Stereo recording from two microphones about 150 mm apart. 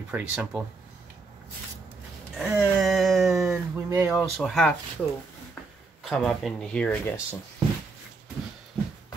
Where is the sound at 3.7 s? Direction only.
20° right (ahead or behind).